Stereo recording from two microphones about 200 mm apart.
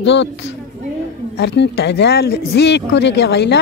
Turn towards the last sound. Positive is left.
turn(degrees=55)  # may be behind; listen again after turning